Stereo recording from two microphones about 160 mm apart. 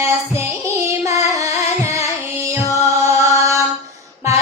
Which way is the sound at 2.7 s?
20° right (ahead or behind).